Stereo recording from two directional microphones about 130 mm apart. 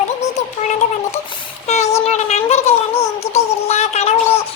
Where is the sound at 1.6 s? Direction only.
60° left (ahead or behind).